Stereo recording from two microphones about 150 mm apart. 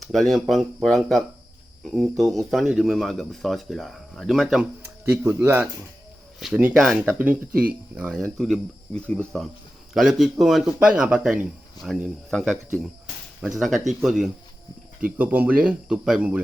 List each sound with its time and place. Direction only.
0.0 s speech: centre (ahead or behind)
4.8 s speech: 15° right (ahead or behind); by 12.5 s 5° left (ahead or behind)
13.6 s speech: centre (ahead or behind)